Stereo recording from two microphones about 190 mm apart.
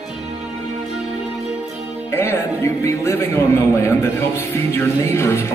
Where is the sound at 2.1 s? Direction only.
10° left (ahead or behind).